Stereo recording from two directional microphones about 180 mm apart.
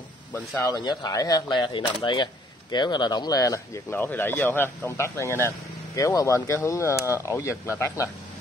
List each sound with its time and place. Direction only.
0.6 s speech: 20° left (ahead or behind)